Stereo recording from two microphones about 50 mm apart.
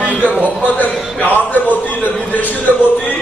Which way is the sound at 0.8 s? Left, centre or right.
Left.